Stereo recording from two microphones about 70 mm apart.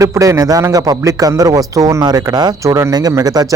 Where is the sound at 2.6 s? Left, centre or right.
Right.